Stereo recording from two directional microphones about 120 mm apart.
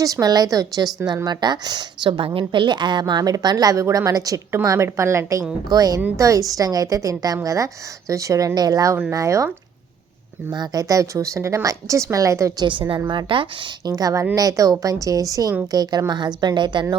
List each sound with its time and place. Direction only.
0.0 s a woman's voice: 30° right (ahead or behind)
10.5 s speech: 30° right (ahead or behind)
13.1 s speech: 45° right (ahead or behind)
13.9 s a woman's voice: 30° right (ahead or behind)